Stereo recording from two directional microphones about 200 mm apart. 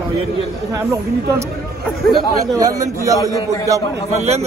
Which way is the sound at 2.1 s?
20° right (ahead or behind).